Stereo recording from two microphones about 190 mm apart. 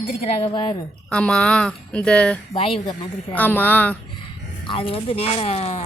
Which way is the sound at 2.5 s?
30° left (ahead or behind).